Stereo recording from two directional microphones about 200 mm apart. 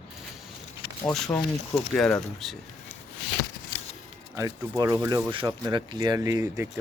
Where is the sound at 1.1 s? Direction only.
5° left (ahead or behind).